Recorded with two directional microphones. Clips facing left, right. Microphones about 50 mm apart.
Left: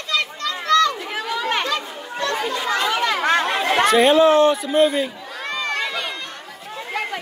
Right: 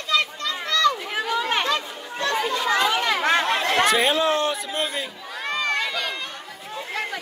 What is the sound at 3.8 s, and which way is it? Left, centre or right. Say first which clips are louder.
A man's voice: left 10 dB; centre.